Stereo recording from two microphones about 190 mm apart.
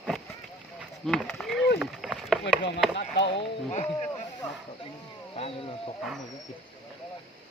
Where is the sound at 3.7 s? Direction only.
35° left (ahead or behind).